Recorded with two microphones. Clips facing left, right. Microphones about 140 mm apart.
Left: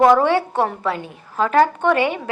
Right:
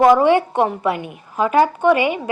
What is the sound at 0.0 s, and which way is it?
Speech, 10° right (ahead or behind).